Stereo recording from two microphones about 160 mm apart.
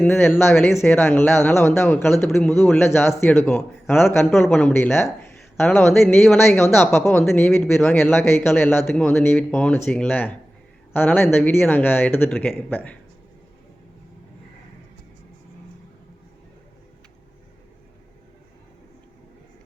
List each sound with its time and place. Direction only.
0.0 s speech: 15° left (ahead or behind)
4.4 s speech: 5° left (ahead or behind)
6.2 s speech: centre (ahead or behind)
6.6 s speech: 15° left (ahead or behind)